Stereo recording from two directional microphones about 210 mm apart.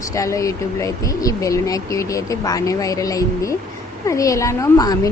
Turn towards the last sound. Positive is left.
turn(degrees=15)  # may be behind; listen again after turning